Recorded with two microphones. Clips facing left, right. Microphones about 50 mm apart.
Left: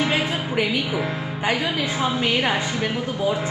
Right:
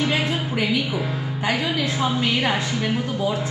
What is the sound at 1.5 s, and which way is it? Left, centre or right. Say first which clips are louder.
A woman's voice: even; centre.